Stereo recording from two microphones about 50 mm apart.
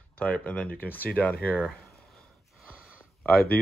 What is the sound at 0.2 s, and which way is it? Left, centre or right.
Speech, left.